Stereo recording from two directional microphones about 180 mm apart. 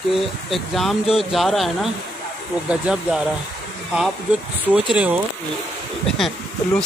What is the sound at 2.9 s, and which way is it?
Speech, 5° right (ahead or behind).